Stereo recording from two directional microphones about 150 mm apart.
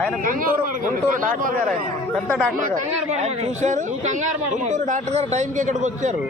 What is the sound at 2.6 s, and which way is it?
Speech, 60° right (ahead or behind).